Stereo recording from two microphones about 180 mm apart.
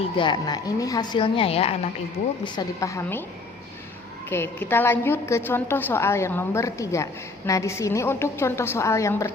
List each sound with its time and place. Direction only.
0.2 s a woman's voice: 25° left (ahead or behind)
2.4 s a woman's voice: 20° left (ahead or behind)
4.3 s a woman's voice: 10° left (ahead or behind)